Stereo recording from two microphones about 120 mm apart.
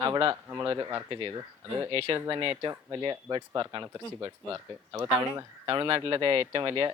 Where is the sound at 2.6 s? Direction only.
35° right (ahead or behind).